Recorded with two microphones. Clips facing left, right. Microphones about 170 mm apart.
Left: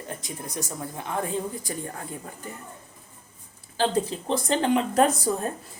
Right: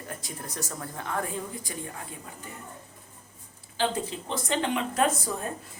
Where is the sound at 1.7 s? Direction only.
40° left (ahead or behind).